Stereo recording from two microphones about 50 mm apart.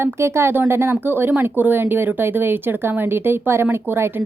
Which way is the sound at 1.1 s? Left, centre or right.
Right.